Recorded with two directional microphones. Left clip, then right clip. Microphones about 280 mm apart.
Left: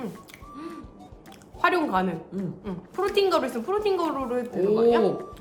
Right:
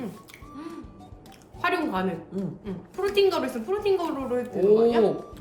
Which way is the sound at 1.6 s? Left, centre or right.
Centre.